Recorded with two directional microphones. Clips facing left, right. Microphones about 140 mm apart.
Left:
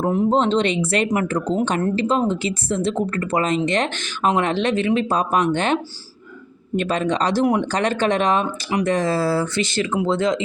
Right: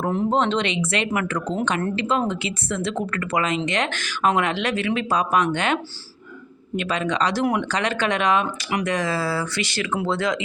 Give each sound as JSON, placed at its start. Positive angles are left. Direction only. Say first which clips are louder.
{"t": 0.0, "sound": "speech", "louder": "left 3 dB", "side_deg": 10}
{"t": 0.3, "sound": "speech", "louder": "left 3 dB", "side_deg": 35}
{"t": 6.7, "sound": "speech", "louder": "left 3 dB", "side_deg": 35}